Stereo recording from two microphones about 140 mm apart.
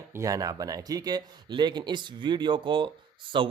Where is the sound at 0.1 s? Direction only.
25° right (ahead or behind).